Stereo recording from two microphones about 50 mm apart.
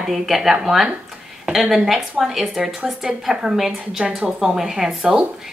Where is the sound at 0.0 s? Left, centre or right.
Centre.